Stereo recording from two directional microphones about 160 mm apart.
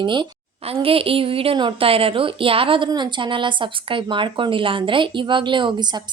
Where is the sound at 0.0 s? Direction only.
30° right (ahead or behind).